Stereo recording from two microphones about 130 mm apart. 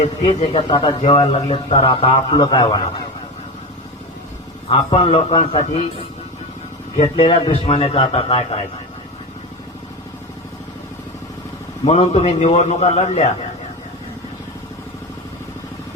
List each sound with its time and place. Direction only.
0.3 s a man's voice: 60° left (ahead or behind)
0.5 s speech: 40° left (ahead or behind)
4.7 s a man's voice: 40° left (ahead or behind)
6.9 s a man's voice: 50° left (ahead or behind)
11.9 s a man's voice: 55° left (ahead or behind)